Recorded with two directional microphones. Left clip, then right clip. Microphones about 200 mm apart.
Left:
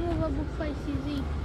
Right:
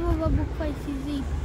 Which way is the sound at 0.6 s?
60° right (ahead or behind).